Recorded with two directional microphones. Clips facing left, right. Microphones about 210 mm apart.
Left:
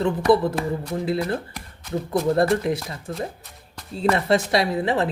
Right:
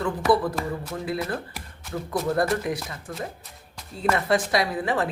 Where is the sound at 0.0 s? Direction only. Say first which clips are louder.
Left 4 dB; 25° left (ahead or behind).